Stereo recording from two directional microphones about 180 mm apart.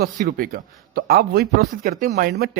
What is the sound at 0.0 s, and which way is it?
A man's voice, 50° right (ahead or behind).